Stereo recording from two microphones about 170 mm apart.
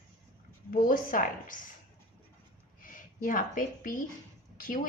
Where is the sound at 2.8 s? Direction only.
55° left (ahead or behind).